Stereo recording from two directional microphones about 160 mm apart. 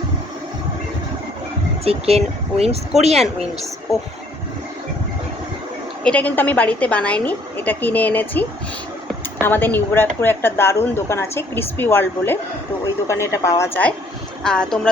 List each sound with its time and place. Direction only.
1.8 s speech: 40° right (ahead or behind)
6.0 s a woman's voice: 10° left (ahead or behind)